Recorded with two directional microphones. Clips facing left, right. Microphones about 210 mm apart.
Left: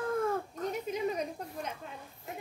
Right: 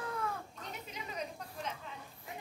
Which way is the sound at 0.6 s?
45° left (ahead or behind).